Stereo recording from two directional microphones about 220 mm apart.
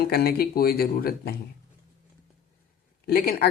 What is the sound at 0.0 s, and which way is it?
Speech, 45° left (ahead or behind).